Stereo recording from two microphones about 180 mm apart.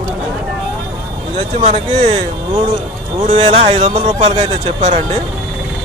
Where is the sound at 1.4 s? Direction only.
35° right (ahead or behind).